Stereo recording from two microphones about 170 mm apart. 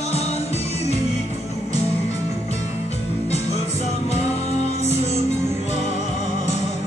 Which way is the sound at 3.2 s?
40° left (ahead or behind).